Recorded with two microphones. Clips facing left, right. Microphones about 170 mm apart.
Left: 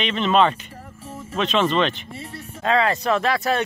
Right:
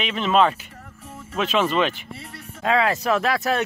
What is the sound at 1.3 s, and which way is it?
Speech, 5° right (ahead or behind).